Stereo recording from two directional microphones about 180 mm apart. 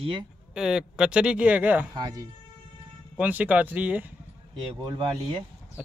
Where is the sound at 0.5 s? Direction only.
5° right (ahead or behind).